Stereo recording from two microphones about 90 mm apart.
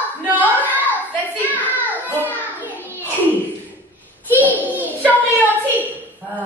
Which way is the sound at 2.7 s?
25° left (ahead or behind).